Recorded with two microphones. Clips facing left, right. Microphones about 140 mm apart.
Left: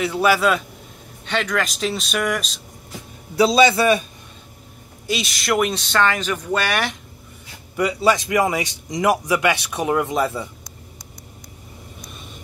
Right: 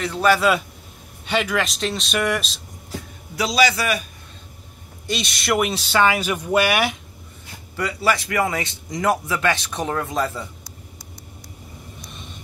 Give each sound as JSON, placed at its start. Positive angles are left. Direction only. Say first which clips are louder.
{"t": 0.0, "sound": "a man's voice", "louder": "even", "side_deg": 10}
{"t": 1.2, "sound": "speech", "louder": "right 1 dB", "side_deg": -10}
{"t": 3.3, "sound": "a man's voice", "louder": "left 5 dB", "side_deg": 30}
{"t": 5.0, "sound": "speech", "louder": "left 1 dB", "side_deg": 5}
{"t": 7.7, "sound": "a man's voice", "louder": "left 4 dB", "side_deg": 20}